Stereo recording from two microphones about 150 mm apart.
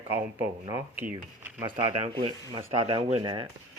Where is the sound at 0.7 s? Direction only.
20° right (ahead or behind).